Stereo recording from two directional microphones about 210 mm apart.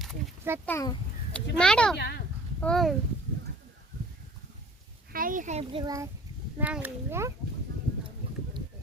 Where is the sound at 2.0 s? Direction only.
50° left (ahead or behind).